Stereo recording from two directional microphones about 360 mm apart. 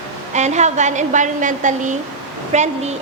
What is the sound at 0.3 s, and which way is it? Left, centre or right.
A woman's voice, centre.